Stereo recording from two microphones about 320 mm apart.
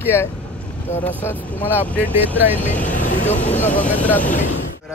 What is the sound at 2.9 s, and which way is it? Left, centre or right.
Vehicle, left.